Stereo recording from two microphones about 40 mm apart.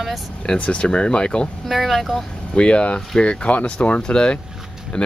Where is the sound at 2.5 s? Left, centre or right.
Left.